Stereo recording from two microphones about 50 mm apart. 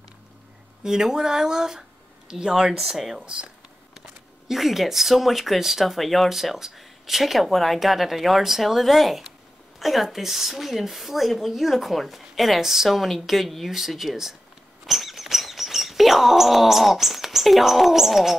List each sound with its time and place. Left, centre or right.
0.8 s speech: centre
4.5 s speech: centre
14.9 s chirp: centre